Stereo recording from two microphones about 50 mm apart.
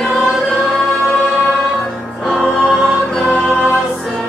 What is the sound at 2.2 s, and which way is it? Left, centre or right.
Music, centre.